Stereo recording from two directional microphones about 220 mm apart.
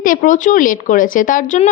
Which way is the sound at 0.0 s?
40° left (ahead or behind).